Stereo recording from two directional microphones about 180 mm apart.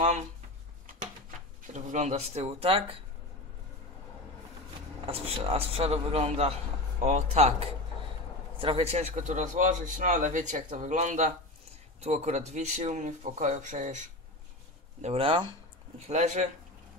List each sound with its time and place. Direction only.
1.7 s speech: 40° right (ahead or behind)
5.0 s a man's voice: 35° right (ahead or behind)
16.1 s speech: 40° right (ahead or behind)